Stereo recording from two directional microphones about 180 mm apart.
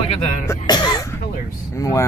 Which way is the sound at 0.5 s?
25° left (ahead or behind).